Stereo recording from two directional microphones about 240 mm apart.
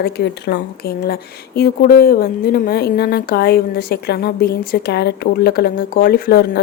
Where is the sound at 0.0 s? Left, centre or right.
Left.